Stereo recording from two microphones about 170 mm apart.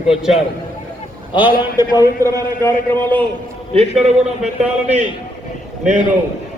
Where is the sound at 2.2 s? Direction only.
15° left (ahead or behind).